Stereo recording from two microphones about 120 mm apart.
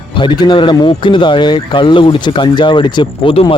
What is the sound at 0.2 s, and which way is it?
A man's voice, 40° left (ahead or behind).